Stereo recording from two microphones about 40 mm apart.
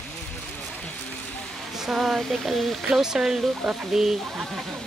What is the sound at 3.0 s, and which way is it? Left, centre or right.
Speech, centre.